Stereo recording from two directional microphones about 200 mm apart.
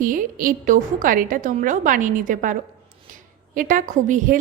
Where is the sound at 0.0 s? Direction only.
40° right (ahead or behind).